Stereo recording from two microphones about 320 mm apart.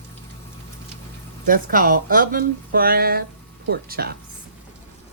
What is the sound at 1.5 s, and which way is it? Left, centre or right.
Speech, right.